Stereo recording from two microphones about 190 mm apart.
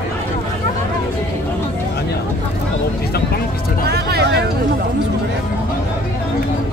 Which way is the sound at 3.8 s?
60° right (ahead or behind).